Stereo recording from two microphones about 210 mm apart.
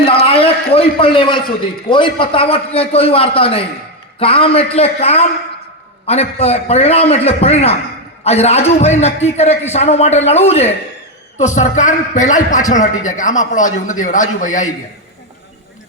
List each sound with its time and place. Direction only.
0.7 s a man's voice: 25° left (ahead or behind)